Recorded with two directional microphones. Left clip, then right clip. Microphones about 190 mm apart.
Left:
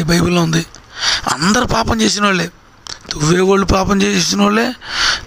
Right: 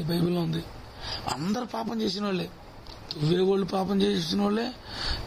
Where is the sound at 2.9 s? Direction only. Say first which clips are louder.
Left 13 dB; 50° left (ahead or behind).